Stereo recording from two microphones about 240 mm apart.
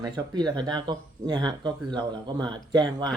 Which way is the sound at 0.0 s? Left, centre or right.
Centre.